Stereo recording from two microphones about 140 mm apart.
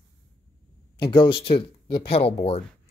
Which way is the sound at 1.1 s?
35° left (ahead or behind).